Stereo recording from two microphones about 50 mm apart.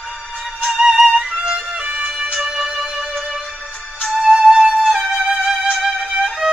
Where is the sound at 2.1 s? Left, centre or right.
Centre.